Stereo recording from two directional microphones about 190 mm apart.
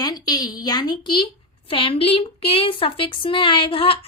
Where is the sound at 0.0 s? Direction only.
20° left (ahead or behind).